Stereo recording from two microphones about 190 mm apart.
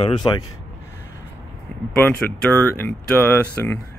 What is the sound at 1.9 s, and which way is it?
Speech, 10° left (ahead or behind).